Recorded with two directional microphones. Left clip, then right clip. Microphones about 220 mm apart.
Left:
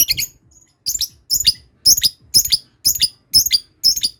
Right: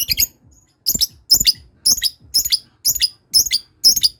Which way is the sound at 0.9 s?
5° left (ahead or behind).